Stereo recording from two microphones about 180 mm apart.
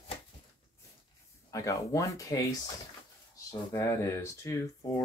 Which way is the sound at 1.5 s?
20° left (ahead or behind).